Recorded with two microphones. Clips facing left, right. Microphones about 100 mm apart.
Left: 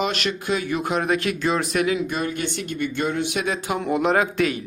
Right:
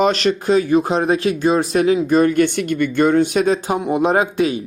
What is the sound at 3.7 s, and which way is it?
Speech, 20° right (ahead or behind).